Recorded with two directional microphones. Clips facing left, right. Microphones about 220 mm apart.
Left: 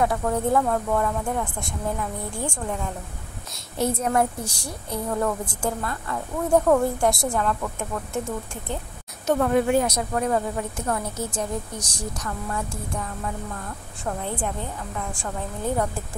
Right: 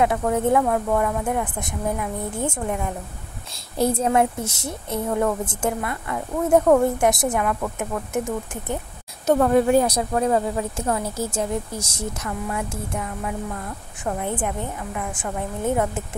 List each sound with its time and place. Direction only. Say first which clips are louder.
0.0 s a woman's voice: right 3 dB; 20° right (ahead or behind)
3.7 s speech: right 3 dB; 35° right (ahead or behind)
4.1 s a woman's voice: right 3 dB; 20° right (ahead or behind)
9.2 s a woman's voice: right 3 dB; 35° right (ahead or behind); by 16.0 s 20° right (ahead or behind)